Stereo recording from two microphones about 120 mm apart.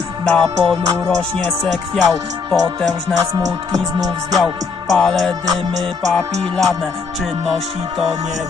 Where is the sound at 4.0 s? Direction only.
30° right (ahead or behind).